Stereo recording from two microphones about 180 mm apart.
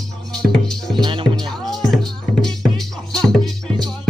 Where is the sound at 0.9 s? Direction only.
25° right (ahead or behind).